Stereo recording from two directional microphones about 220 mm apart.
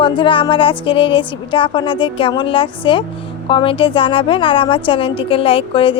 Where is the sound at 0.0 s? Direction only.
20° left (ahead or behind).